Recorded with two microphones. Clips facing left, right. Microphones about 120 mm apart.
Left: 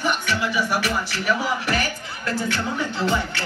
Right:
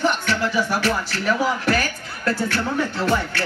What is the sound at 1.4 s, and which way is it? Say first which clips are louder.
Music: right 3 dB; 40° right (ahead or behind).